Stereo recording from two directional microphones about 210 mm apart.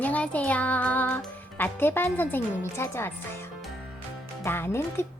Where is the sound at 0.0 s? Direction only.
5° left (ahead or behind).